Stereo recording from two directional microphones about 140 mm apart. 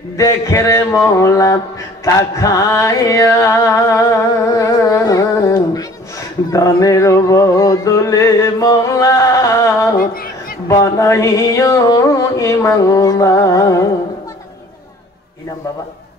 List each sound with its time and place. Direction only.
0.2 s music: 20° left (ahead or behind)
9.9 s speech: 90° left
10.7 s music: 25° left (ahead or behind)